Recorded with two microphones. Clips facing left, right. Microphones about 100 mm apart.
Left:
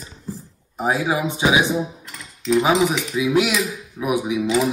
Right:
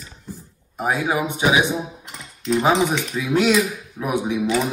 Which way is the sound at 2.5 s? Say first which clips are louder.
Left 1 dB; 5° left (ahead or behind).